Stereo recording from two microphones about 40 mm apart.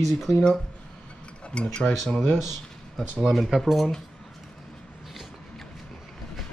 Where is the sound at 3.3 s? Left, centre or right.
Centre.